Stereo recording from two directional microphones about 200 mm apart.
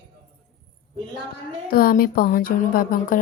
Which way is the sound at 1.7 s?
45° left (ahead or behind).